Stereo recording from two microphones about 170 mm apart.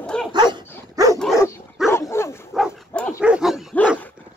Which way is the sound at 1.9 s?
15° left (ahead or behind).